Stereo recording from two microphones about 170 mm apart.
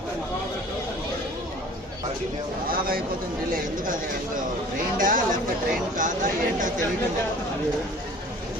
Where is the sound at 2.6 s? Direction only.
60° right (ahead or behind).